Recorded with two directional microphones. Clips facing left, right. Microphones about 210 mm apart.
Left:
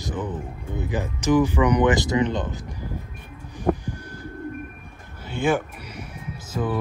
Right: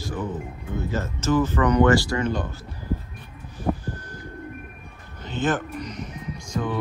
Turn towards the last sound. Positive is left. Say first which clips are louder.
# left 1 dB
turn(degrees=5)  # may be behind; listen again after turning